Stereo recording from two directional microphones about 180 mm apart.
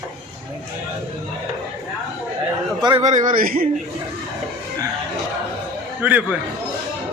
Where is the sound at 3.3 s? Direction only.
50° right (ahead or behind).